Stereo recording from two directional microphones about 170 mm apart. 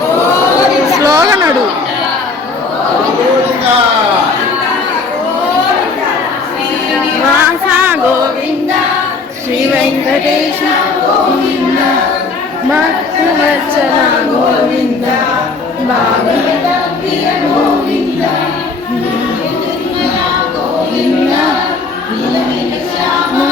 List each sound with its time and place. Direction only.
0.9 s chatter: 20° right (ahead or behind)
7.7 s music: 10° right (ahead or behind)